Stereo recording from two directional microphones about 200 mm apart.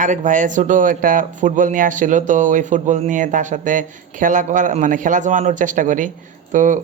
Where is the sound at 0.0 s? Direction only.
40° right (ahead or behind).